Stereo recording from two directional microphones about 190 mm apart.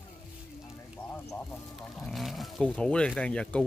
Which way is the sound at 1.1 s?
10° left (ahead or behind).